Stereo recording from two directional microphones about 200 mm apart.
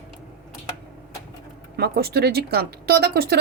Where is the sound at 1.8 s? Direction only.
50° right (ahead or behind).